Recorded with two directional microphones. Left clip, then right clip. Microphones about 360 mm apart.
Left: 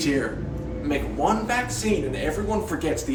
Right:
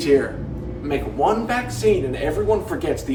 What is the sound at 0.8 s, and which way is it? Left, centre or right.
Speech, centre.